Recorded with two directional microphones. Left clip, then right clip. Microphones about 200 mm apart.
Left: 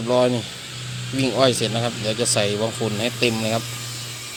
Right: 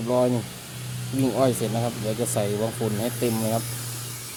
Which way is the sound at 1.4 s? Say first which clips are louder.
Left 5 dB; 10° right (ahead or behind).